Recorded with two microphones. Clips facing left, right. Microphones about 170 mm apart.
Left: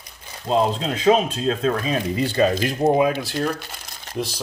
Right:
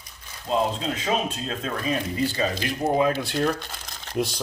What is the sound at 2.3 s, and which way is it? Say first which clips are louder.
Speech: left 8 dB; 65° left (ahead or behind).